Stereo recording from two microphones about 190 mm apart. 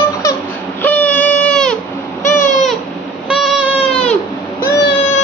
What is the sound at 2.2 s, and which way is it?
Baby cry, 40° left (ahead or behind).